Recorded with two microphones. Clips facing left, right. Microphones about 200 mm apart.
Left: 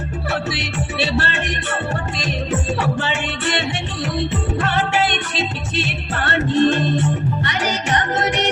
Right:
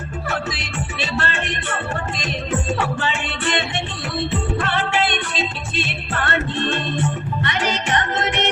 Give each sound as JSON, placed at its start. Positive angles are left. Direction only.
{"t": 0.9, "sound": "music", "side_deg": 35}
{"t": 4.6, "sound": "music", "side_deg": 40}